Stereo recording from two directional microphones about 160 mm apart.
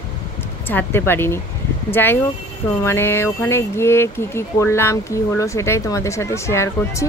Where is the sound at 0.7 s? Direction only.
15° left (ahead or behind).